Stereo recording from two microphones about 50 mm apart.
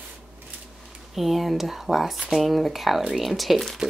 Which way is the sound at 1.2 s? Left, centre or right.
Centre.